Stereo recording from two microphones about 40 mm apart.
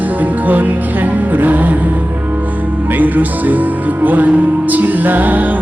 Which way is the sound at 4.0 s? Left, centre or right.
Right.